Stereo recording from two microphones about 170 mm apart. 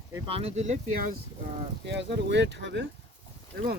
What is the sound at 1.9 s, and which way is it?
Speech, 90° right.